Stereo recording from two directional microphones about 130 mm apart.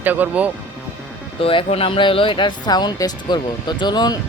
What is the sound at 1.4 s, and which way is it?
Speech, 45° left (ahead or behind).